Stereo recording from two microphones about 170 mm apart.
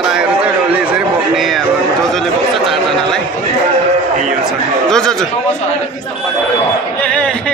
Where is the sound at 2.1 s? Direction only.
Centre (ahead or behind).